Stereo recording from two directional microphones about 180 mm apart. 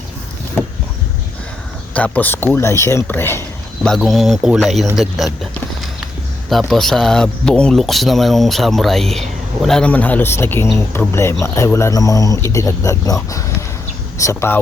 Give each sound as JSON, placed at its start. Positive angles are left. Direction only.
{"t": 1.9, "sound": "speech", "side_deg": 5}
{"t": 3.8, "sound": "speech", "side_deg": 0}
{"t": 6.5, "sound": "speech", "side_deg": 0}
{"t": 14.2, "sound": "speech", "side_deg": 15}